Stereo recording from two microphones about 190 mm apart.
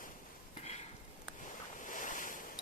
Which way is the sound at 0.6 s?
35° left (ahead or behind).